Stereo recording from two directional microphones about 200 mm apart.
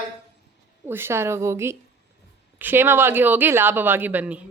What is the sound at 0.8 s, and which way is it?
Speech, 10° right (ahead or behind).